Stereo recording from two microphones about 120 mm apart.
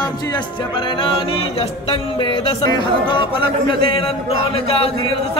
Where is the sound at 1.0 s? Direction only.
45° left (ahead or behind).